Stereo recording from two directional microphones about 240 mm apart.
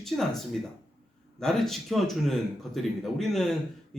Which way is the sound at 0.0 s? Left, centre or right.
Centre.